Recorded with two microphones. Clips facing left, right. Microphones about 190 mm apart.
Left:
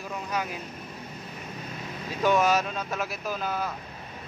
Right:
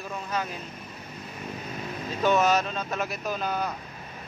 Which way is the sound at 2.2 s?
10° left (ahead or behind).